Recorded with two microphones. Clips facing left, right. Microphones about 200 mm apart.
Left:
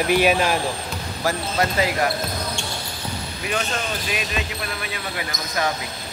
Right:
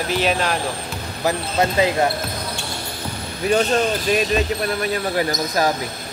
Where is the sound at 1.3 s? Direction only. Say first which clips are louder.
Right 3 dB; 20° right (ahead or behind).